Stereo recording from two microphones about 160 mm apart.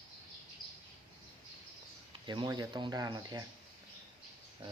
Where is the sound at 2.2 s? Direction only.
30° right (ahead or behind).